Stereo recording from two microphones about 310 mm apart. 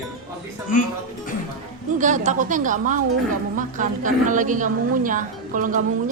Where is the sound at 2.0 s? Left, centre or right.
Right.